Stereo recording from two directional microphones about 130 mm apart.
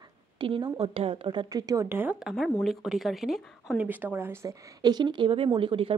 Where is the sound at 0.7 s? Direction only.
45° right (ahead or behind); by 2.1 s 15° right (ahead or behind).